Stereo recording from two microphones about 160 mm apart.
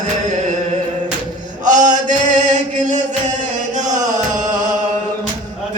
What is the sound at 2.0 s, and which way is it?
Chant, 50° right (ahead or behind).